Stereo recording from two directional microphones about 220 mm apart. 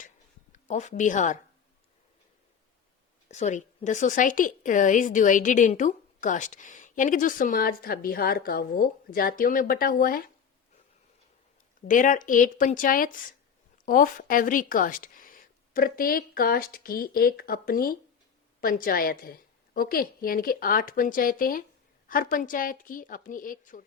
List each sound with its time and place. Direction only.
0.5 s speech: 35° left (ahead or behind)
3.2 s a woman's voice: 30° left (ahead or behind)
11.9 s a woman's voice: 35° left (ahead or behind)